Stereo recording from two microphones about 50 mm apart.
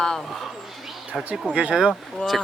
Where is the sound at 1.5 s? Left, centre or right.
Centre.